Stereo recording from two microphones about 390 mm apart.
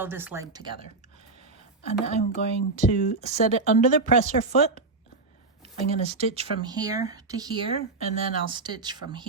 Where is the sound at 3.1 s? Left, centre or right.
Centre.